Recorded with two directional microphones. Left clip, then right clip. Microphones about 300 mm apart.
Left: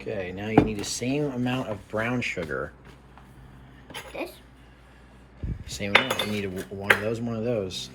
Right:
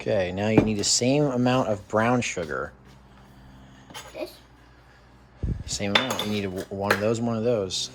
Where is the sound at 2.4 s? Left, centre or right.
Centre.